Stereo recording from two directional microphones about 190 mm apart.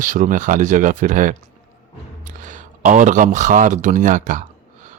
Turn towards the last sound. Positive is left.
turn(degrees=-45)  # may be behind; listen again after turning